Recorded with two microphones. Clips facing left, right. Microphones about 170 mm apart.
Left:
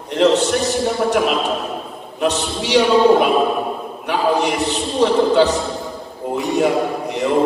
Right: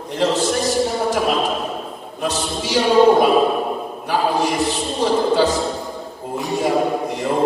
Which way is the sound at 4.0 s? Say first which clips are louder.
Left 2 dB; 65° left (ahead or behind).